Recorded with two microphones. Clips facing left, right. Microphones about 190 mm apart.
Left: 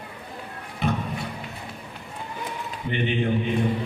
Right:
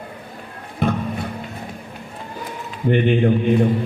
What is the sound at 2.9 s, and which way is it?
Speech, 50° right (ahead or behind).